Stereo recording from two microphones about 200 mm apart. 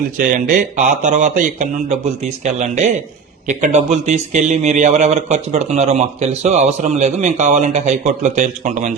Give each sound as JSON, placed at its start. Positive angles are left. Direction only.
{"t": 0.2, "sound": "a man's voice", "side_deg": -40}